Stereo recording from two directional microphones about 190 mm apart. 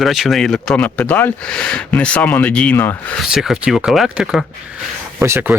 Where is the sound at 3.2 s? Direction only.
5° right (ahead or behind).